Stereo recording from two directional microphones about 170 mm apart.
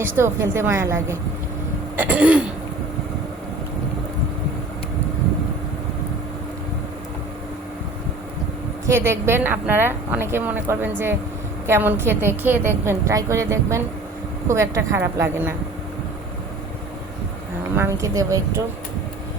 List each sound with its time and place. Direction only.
0.0 s a woman's voice: 15° right (ahead or behind)
8.9 s a woman's voice: 15° right (ahead or behind)
17.7 s a woman's voice: 15° right (ahead or behind)